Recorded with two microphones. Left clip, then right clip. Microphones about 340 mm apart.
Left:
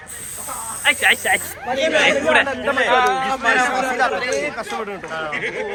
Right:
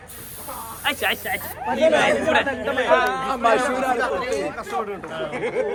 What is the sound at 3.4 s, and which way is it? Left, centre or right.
Speech, right.